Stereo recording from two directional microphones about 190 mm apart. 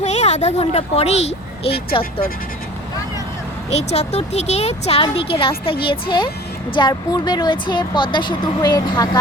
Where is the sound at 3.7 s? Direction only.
35° left (ahead or behind).